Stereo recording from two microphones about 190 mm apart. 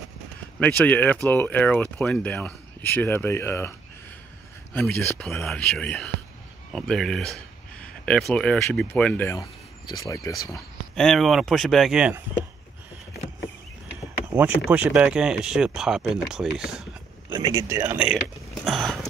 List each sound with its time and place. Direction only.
0.6 s speech: 5° left (ahead or behind)
4.7 s speech: 5° left (ahead or behind)
11.0 s speech: centre (ahead or behind)
14.3 s speech: 10° right (ahead or behind)
17.3 s speech: 20° right (ahead or behind)
18.6 s a sound: centre (ahead or behind)